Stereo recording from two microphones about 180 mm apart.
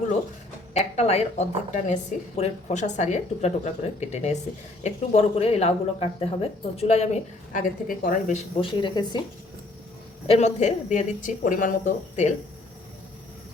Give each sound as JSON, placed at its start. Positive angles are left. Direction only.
{"t": 0.7, "sound": "speech", "side_deg": 35}
{"t": 10.2, "sound": "speech", "side_deg": 35}